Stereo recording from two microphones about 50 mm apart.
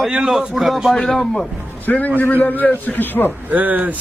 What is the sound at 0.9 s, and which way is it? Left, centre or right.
Speech, centre.